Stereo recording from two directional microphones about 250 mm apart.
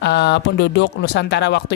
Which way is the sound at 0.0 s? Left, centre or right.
Left.